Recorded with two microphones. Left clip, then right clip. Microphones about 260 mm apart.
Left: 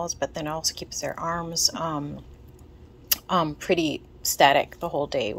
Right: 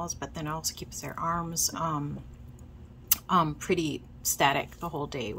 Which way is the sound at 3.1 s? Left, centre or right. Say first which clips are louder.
Left 2 dB; right.